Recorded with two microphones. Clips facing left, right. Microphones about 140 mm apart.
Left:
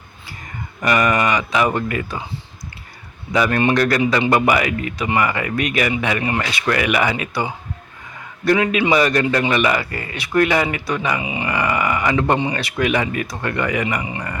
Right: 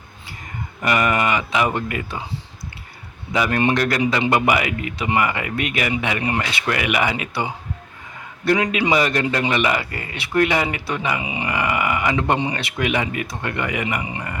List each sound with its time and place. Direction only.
0.8 s speech: 25° right (ahead or behind)
3.3 s speech: 20° right (ahead or behind)
11.2 s speech: 30° left (ahead or behind)
11.4 s speech: 20° right (ahead or behind)